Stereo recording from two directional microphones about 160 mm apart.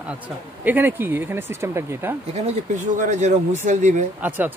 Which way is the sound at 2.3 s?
45° right (ahead or behind).